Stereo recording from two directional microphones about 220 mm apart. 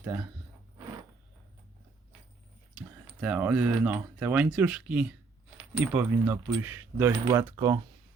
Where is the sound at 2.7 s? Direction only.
5° right (ahead or behind).